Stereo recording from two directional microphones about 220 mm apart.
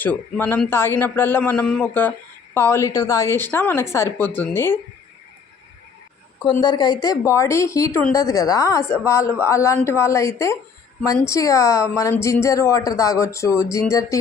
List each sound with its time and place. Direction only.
0.0 s a woman's voice: 10° left (ahead or behind)
6.4 s a woman's voice: 20° left (ahead or behind)